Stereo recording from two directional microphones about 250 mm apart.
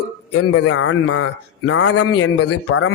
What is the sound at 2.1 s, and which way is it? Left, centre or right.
Speech, left.